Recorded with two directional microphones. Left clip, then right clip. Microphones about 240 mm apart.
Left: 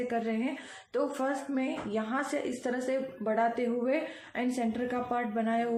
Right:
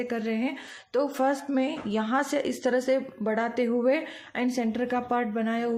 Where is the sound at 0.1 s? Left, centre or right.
Right.